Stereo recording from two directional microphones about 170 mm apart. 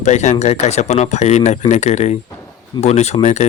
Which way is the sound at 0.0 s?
45° left (ahead or behind).